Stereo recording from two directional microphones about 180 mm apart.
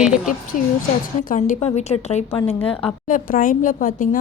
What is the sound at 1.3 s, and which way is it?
A woman's voice, 45° left (ahead or behind).